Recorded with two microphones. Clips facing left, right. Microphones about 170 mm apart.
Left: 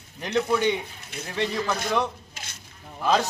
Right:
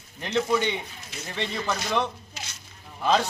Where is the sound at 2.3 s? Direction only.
55° left (ahead or behind).